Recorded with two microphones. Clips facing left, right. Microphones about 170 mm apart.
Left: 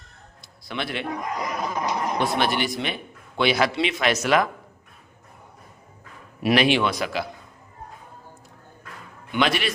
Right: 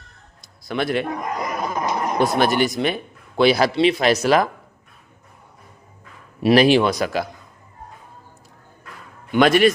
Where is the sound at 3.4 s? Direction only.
35° right (ahead or behind).